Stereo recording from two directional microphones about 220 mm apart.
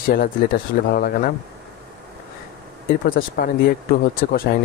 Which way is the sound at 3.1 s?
40° left (ahead or behind).